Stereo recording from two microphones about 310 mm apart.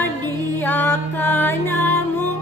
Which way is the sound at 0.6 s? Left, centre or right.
Centre.